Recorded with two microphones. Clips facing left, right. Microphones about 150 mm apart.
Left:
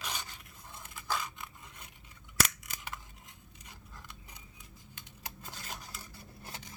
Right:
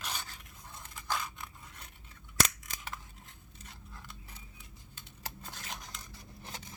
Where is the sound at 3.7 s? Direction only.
15° left (ahead or behind).